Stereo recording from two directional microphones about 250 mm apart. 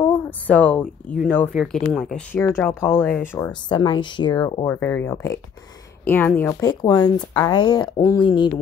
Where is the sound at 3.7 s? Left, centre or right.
Centre.